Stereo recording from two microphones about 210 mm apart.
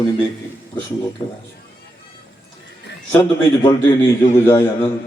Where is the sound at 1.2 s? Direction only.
25° left (ahead or behind).